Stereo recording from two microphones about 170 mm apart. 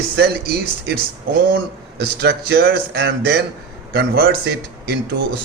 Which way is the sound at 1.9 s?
75° right (ahead or behind).